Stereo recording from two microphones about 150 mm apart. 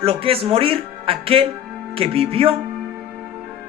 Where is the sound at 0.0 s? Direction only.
40° right (ahead or behind).